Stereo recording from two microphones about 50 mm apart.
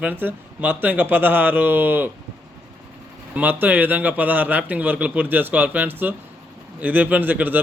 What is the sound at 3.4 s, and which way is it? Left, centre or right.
A man's voice, right.